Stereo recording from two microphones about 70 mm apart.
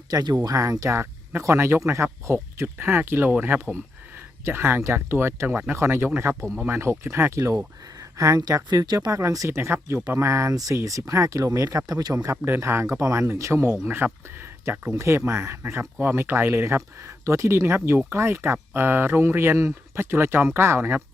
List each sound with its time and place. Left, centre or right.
0.1 s speech: right
8.2 s speech: right
9.0 s speech: right
9.6 s speech: right
14.9 s speech: right